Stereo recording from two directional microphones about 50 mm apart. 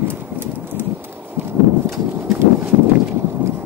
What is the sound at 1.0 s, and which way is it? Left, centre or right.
Horse, right.